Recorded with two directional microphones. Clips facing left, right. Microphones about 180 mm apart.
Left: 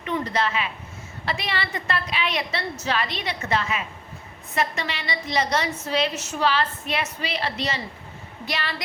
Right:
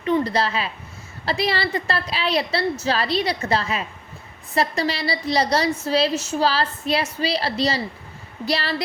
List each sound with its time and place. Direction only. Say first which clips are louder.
0.0 s a woman's voice: right 5 dB; 35° right (ahead or behind)